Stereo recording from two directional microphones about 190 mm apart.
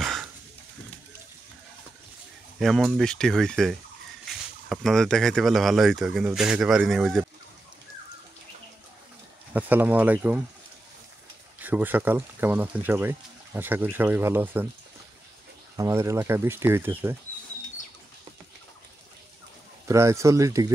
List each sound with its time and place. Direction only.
0.0 s a sound: centre (ahead or behind)
2.6 s speech: centre (ahead or behind)
9.5 s speech: 10° right (ahead or behind)
11.6 s speech: 10° right (ahead or behind)
15.7 s speech: 15° right (ahead or behind)
19.9 s speech: 15° right (ahead or behind)